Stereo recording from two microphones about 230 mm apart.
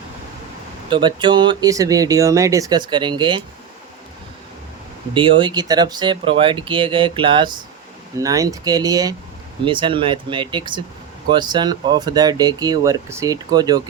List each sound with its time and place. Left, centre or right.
0.9 s speech: right
5.1 s speech: right